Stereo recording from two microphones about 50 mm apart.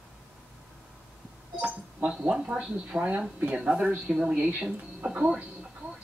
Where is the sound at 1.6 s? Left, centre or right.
Right.